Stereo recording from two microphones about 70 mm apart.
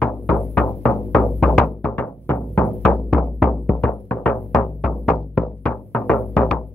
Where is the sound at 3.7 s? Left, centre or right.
Centre.